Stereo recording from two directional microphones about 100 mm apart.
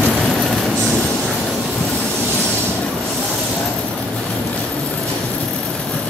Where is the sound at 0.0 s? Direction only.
5° left (ahead or behind).